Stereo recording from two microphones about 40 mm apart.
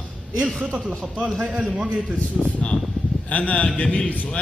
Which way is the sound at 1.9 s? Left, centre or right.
Right.